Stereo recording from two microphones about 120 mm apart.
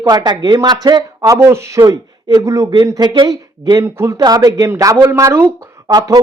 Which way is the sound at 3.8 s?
20° right (ahead or behind).